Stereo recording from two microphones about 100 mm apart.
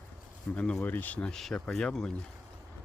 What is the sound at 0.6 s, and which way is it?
Speech, 10° left (ahead or behind).